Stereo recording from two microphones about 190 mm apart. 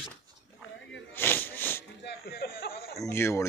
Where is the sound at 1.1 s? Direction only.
10° left (ahead or behind).